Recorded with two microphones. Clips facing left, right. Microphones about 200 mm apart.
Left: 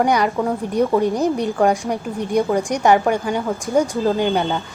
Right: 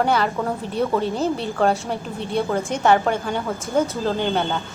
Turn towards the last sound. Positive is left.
turn(degrees=15)  # may be behind; listen again after turning